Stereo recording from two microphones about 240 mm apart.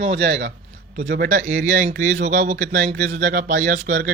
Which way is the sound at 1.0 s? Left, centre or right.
Right.